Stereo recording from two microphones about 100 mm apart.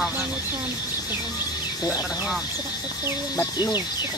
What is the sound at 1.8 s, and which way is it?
Speech, 40° left (ahead or behind).